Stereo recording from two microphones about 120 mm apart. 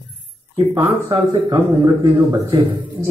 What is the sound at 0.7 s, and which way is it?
A man's voice, 25° right (ahead or behind).